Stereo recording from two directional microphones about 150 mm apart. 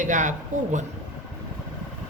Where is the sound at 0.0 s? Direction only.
55° right (ahead or behind).